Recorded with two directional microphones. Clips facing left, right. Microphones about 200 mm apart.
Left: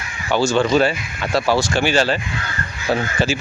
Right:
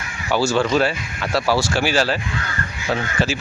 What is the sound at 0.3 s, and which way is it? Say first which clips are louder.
Speech: left 2 dB; 5° right (ahead or behind).